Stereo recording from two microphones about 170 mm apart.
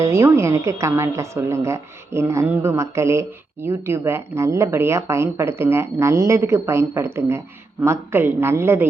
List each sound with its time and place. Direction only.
0.0 s a woman's voice: 15° right (ahead or behind)